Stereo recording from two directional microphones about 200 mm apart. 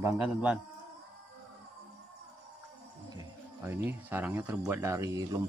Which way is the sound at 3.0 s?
15° right (ahead or behind).